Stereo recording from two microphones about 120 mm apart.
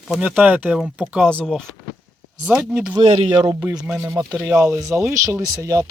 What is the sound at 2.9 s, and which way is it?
Speech, 45° right (ahead or behind).